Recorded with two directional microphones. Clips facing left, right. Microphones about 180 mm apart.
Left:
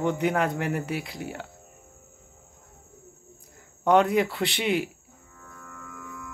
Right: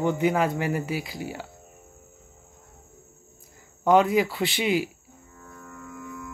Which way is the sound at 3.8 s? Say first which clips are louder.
Right 1 dB; centre (ahead or behind).